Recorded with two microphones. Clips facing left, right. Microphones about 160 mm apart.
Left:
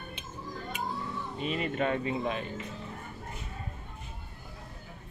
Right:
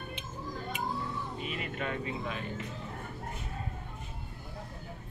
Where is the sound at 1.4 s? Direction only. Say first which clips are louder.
Left 9 dB; 30° left (ahead or behind).